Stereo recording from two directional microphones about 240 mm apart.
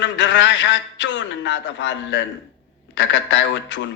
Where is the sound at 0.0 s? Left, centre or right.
Left.